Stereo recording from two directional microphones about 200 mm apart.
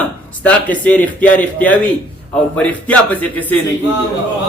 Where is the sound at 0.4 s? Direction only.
5° left (ahead or behind).